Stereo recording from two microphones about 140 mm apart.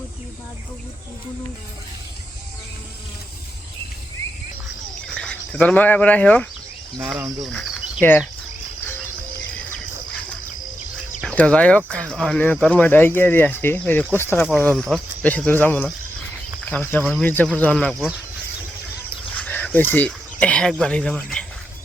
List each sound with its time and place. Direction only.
5.1 s speech: 5° left (ahead or behind)
7.2 s speech: 25° right (ahead or behind)
8.0 s speech: 15° left (ahead or behind)
11.2 s speech: 5° left (ahead or behind)
14.6 s speech: 5° left (ahead or behind)
17.0 s speech: centre (ahead or behind)
17.2 s speech: 10° left (ahead or behind)
19.3 s speech: 10° left (ahead or behind)
21.2 s cricket: 5° left (ahead or behind)